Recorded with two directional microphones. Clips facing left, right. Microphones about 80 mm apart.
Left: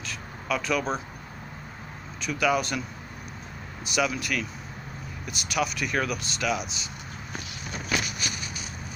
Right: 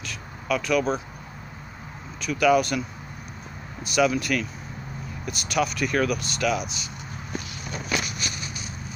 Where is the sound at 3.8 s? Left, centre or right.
Centre.